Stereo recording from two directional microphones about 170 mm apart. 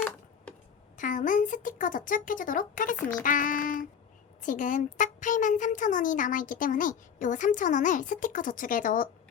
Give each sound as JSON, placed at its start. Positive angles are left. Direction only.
{"t": 0.9, "sound": "speech", "side_deg": 50}